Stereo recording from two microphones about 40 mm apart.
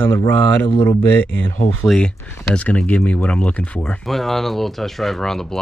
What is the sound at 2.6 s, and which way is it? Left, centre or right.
Speech, left.